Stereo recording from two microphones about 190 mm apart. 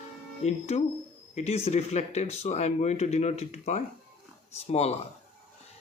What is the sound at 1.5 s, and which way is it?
Speech, 35° left (ahead or behind).